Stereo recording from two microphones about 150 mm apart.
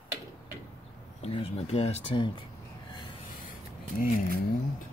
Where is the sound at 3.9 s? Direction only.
75° left (ahead or behind).